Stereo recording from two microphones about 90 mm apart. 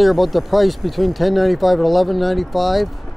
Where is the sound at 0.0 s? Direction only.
Centre (ahead or behind).